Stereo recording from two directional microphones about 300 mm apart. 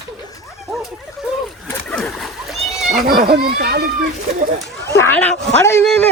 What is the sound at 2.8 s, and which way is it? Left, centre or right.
Speech, right.